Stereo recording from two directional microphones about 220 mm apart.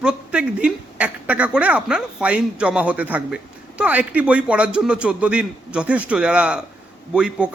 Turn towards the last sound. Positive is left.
turn(degrees=-5)  # may be behind; listen again after turning